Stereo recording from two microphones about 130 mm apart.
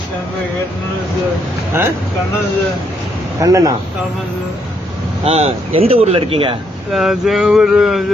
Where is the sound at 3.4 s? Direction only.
25° right (ahead or behind).